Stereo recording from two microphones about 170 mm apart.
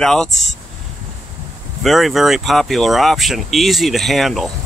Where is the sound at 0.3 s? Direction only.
40° left (ahead or behind).